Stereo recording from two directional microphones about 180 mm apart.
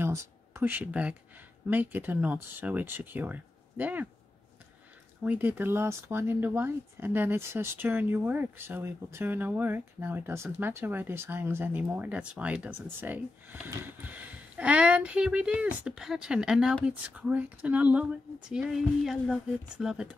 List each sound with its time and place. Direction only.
0.0 s speech: 15° right (ahead or behind)
5.2 s speech: 10° right (ahead or behind)